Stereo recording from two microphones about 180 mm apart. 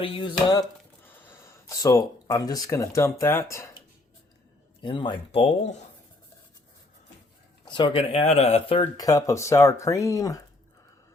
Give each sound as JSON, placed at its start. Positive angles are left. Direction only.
{"t": 0.0, "sound": "speech", "side_deg": 30}
{"t": 1.0, "sound": "speech", "side_deg": 10}
{"t": 7.6, "sound": "speech", "side_deg": 25}
{"t": 8.8, "sound": "speech", "side_deg": 20}